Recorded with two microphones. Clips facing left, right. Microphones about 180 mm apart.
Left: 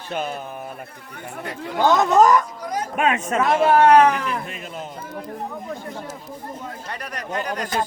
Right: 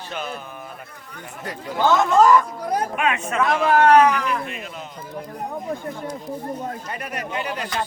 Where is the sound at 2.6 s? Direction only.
60° right (ahead or behind).